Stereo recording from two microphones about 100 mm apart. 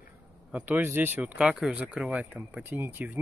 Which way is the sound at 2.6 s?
25° right (ahead or behind).